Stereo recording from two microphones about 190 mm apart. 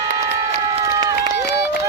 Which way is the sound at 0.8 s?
20° right (ahead or behind).